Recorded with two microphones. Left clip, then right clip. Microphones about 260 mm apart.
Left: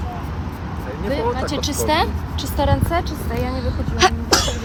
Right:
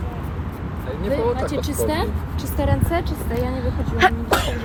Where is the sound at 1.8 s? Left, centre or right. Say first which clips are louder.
Left 5 dB; centre.